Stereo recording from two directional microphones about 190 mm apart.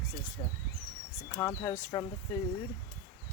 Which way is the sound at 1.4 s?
15° left (ahead or behind).